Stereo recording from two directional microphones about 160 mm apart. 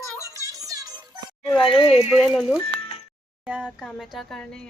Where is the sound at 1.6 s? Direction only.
35° left (ahead or behind).